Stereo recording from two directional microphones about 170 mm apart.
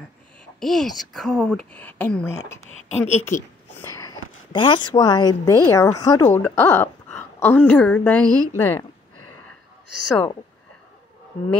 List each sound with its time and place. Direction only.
0.6 s speech: centre (ahead or behind)
2.6 s speech: 40° left (ahead or behind)
3.7 s a woman's voice: 15° left (ahead or behind)